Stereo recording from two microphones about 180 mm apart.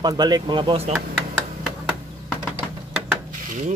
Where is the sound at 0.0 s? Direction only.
25° right (ahead or behind).